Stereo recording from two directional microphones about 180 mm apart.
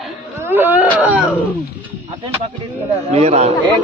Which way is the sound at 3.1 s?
35° right (ahead or behind).